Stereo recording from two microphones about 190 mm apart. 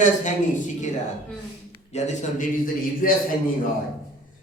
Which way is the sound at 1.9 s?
35° left (ahead or behind).